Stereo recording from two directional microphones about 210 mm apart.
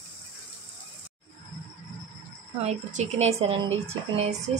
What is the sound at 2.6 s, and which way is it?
A woman's voice, 30° right (ahead or behind).